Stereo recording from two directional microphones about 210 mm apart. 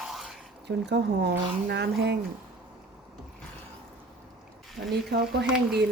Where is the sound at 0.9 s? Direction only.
55° right (ahead or behind).